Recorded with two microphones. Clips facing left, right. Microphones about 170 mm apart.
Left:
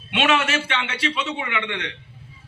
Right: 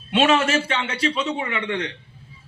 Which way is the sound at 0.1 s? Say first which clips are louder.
Right 3 dB; 30° right (ahead or behind).